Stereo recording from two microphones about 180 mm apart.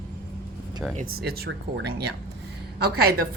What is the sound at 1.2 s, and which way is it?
Speech, 60° right (ahead or behind).